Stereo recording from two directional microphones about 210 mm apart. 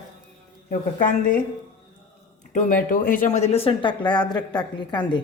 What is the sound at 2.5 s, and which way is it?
Speech, 40° left (ahead or behind).